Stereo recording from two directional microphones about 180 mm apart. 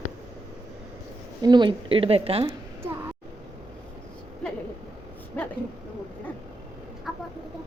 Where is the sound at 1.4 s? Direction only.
25° right (ahead or behind).